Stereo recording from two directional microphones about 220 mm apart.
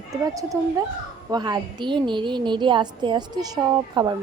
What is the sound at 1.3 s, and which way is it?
A woman's voice, 20° right (ahead or behind).